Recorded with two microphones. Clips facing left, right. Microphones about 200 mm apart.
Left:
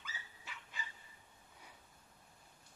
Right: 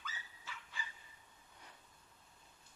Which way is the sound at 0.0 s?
15° left (ahead or behind).